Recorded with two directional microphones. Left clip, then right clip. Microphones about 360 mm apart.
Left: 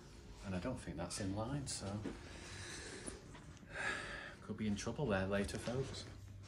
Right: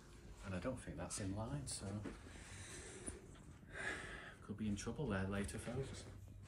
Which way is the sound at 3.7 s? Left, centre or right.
Left.